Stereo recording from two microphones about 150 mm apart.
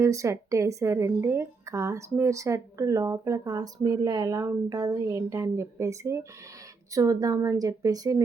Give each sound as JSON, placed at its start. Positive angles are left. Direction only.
{"t": 0.0, "sound": "a woman's voice", "side_deg": -20}